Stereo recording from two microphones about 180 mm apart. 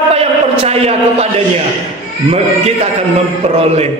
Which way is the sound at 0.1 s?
35° right (ahead or behind).